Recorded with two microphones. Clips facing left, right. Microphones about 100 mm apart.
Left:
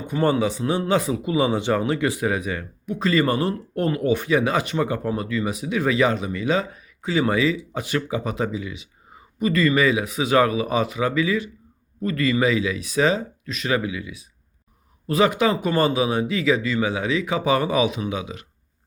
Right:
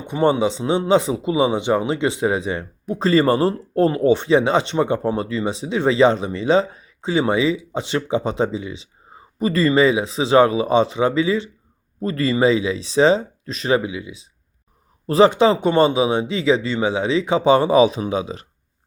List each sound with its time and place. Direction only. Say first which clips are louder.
0.0 s a man's voice: right 3 dB; 20° right (ahead or behind)